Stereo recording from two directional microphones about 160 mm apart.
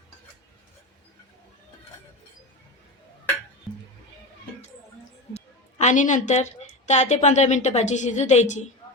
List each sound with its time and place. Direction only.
3.7 s music: centre (ahead or behind)
5.3 s a woman's voice: 45° left (ahead or behind)